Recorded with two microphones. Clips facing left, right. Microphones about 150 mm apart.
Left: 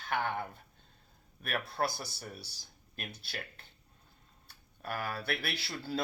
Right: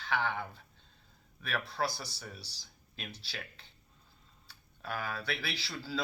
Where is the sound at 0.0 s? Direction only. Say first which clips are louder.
Even; 50° left (ahead or behind).